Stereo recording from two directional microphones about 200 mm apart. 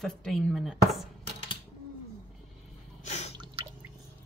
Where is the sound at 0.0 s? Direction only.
Centre (ahead or behind).